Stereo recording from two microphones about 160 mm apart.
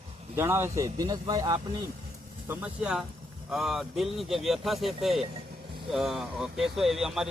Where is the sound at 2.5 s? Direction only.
5° right (ahead or behind).